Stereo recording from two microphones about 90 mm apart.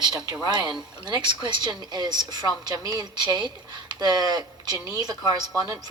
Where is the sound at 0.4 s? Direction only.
55° right (ahead or behind).